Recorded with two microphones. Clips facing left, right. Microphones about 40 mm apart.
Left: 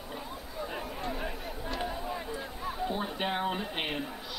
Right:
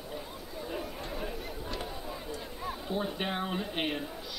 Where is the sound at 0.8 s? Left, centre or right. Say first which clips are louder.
Left 3 dB; centre.